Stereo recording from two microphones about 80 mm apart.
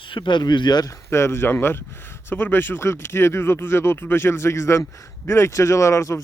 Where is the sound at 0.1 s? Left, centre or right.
Left.